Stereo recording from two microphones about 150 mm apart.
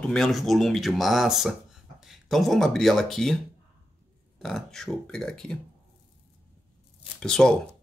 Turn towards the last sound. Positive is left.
turn(degrees=5)  # may be behind; listen again after turning